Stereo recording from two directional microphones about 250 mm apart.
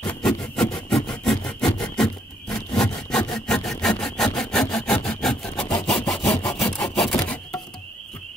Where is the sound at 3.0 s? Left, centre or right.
Centre.